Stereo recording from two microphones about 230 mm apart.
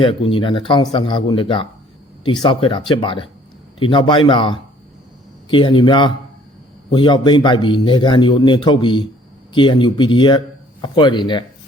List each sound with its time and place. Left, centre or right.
0.0 s speech: left